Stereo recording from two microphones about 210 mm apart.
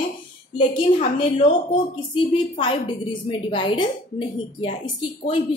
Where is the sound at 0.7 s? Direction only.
25° left (ahead or behind).